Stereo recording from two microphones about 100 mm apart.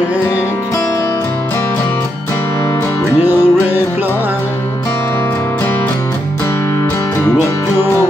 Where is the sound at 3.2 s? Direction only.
20° right (ahead or behind).